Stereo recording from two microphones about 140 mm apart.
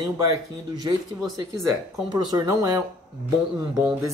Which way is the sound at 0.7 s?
30° right (ahead or behind).